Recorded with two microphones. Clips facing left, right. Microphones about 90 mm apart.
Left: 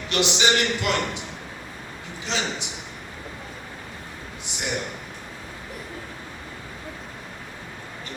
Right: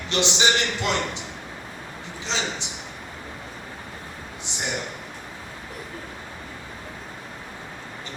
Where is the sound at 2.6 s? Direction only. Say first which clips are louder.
Left 1 dB; 30° right (ahead or behind).